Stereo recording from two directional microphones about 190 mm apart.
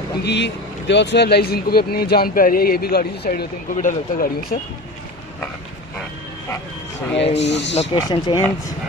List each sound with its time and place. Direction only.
0.2 s speech: 65° left (ahead or behind)
7.3 s speech: 65° left (ahead or behind)
7.9 s speech: 25° left (ahead or behind)